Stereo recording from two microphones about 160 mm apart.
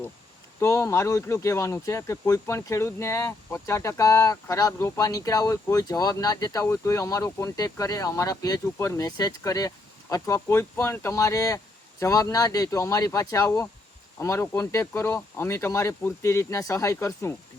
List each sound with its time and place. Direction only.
0.6 s speech: 15° left (ahead or behind)